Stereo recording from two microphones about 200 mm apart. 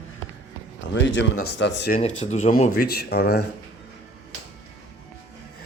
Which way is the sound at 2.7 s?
50° left (ahead or behind).